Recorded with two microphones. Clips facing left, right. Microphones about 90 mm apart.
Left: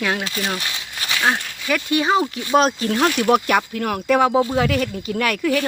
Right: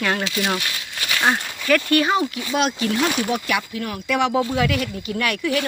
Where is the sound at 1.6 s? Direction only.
10° left (ahead or behind).